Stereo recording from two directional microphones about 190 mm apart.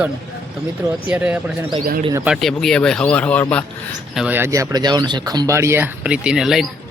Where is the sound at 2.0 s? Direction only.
20° right (ahead or behind).